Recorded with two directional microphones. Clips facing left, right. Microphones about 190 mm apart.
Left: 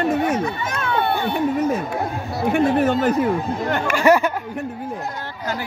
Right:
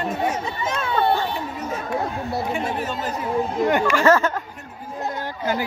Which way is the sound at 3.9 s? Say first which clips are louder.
Left 4 dB; 15° left (ahead or behind).